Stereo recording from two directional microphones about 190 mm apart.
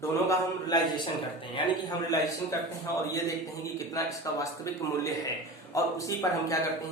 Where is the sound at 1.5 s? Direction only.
20° left (ahead or behind).